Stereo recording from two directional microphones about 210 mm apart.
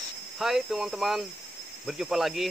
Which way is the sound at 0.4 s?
Centre (ahead or behind).